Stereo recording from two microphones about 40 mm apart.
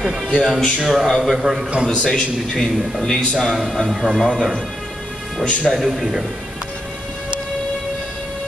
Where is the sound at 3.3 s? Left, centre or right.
Centre.